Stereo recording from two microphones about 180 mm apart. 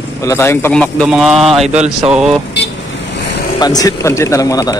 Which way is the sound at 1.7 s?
40° right (ahead or behind).